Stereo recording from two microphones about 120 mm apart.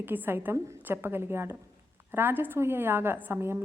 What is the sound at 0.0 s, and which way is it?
A woman's voice, 15° right (ahead or behind).